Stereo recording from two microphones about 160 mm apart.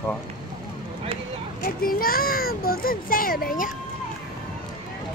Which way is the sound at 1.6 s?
65° left (ahead or behind).